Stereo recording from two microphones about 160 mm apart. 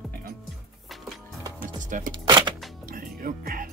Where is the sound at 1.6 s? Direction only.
55° right (ahead or behind).